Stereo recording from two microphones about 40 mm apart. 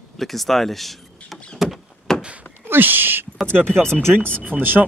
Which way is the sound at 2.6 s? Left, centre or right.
Right.